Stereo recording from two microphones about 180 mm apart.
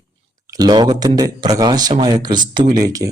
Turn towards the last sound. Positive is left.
turn(degrees=-20)  # may be behind; listen again after turning